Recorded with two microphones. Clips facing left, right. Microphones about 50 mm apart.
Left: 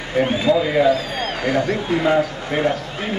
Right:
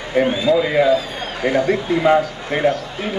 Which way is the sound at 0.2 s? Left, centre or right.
Right.